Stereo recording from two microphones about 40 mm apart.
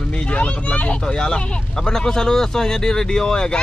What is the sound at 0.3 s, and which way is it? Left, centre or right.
Speech, left.